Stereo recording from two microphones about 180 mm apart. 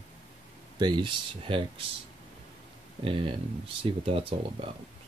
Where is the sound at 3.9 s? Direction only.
30° right (ahead or behind).